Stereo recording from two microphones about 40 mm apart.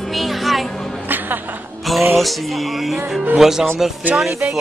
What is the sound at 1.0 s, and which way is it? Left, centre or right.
Music, right.